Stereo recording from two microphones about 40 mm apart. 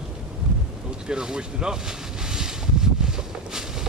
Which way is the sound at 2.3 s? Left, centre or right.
Centre.